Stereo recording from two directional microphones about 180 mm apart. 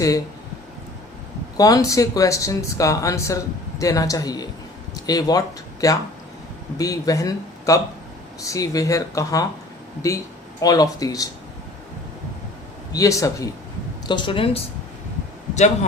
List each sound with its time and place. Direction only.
1.5 s speech: 20° left (ahead or behind)
12.9 s speech: 20° left (ahead or behind)
15.5 s a man's voice: 40° left (ahead or behind)